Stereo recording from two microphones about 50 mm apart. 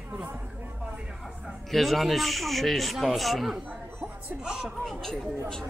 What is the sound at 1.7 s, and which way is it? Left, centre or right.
A man's voice, centre.